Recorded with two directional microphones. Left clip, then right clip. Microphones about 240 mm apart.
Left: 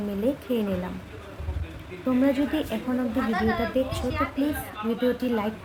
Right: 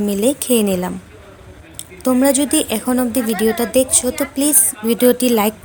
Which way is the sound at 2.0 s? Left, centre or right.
Right.